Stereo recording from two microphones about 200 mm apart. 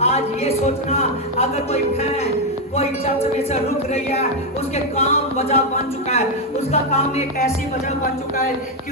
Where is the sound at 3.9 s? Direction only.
30° left (ahead or behind).